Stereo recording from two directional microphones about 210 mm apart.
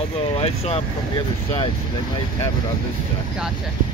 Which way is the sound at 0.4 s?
30° left (ahead or behind).